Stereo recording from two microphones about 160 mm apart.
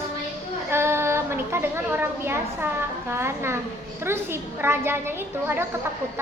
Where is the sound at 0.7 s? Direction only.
15° right (ahead or behind).